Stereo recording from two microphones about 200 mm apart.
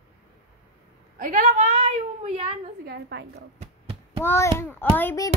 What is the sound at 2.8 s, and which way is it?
Speech, 50° right (ahead or behind).